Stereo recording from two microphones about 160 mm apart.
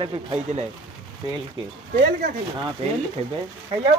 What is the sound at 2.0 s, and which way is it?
Speech, 60° right (ahead or behind).